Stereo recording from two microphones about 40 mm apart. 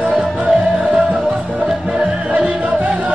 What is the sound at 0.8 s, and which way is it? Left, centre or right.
Music, right.